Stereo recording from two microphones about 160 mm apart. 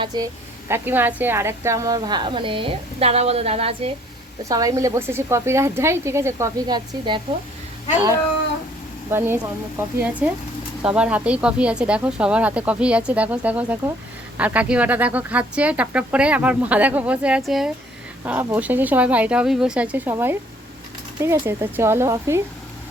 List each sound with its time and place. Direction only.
0.0 s a woman's voice: 25° right (ahead or behind)
0.7 s a woman's voice: 10° right (ahead or behind); by 3.9 s 35° right (ahead or behind)
4.4 s speech: 20° right (ahead or behind)
9.0 s speech: 15° right (ahead or behind)
21.4 s speech: 15° right (ahead or behind)